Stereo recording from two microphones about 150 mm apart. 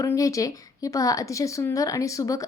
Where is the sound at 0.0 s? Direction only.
20° left (ahead or behind).